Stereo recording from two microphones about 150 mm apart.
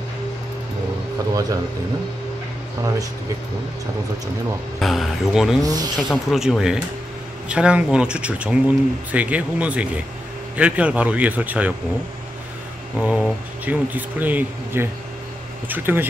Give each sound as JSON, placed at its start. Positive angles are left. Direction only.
{"t": 4.7, "sound": "speech", "side_deg": 0}
{"t": 5.6, "sound": "speech", "side_deg": -25}
{"t": 6.0, "sound": "speech", "side_deg": 0}
{"t": 12.9, "sound": "speech", "side_deg": -5}